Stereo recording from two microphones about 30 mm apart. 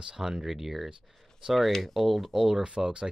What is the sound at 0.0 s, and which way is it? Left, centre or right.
Speech, right.